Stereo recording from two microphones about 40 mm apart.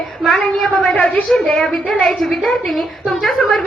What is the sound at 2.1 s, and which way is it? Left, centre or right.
A woman's voice, centre.